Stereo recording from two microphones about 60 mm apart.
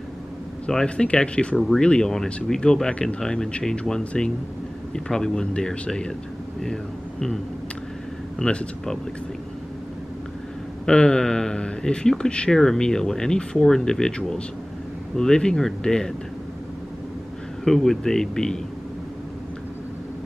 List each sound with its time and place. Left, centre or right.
0.7 s speech: centre
1.6 s speech: centre
8.4 s speech: centre
10.9 s speech: centre
17.6 s speech: centre